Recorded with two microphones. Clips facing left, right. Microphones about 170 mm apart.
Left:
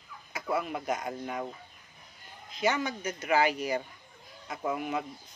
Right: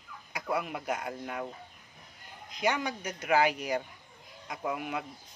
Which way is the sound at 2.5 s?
15° right (ahead or behind).